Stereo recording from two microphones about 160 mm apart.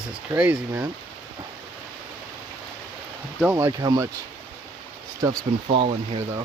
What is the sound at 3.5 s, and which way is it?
Speech, 20° right (ahead or behind).